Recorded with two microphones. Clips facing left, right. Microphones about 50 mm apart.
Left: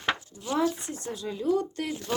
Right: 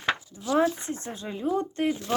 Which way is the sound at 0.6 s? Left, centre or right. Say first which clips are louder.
Right 3 dB; right.